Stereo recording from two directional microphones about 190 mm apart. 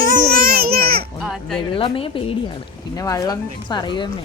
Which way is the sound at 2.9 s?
20° left (ahead or behind).